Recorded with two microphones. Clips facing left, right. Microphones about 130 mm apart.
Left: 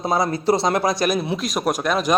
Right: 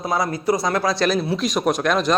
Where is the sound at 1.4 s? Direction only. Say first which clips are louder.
Right 2 dB; centre (ahead or behind).